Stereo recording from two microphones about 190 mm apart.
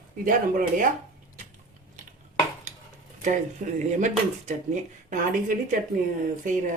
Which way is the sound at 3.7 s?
40° right (ahead or behind).